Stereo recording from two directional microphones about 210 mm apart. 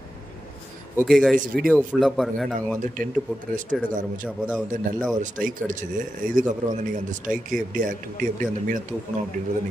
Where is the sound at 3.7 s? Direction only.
Centre (ahead or behind).